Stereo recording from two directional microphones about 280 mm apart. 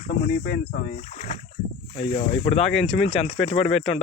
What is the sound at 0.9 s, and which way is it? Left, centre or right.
Speech, left.